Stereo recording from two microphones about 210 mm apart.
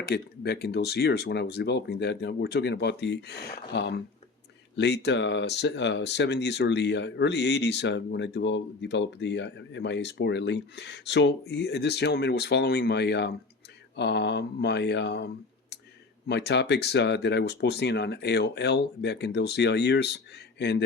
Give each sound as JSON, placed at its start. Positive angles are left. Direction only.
{"t": 0.1, "sound": "speech", "side_deg": 50}